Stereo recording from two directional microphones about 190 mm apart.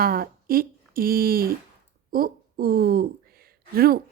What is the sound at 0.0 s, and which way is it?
A woman's voice, 50° right (ahead or behind).